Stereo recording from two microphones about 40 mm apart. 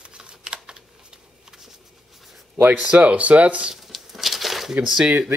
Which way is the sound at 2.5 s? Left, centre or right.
Right.